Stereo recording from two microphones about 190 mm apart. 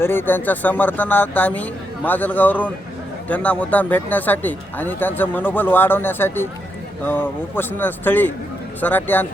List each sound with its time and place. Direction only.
0.0 s speech: 10° left (ahead or behind)